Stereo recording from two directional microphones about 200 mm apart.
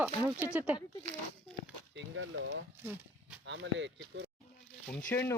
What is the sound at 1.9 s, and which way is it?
Speech, 70° right (ahead or behind).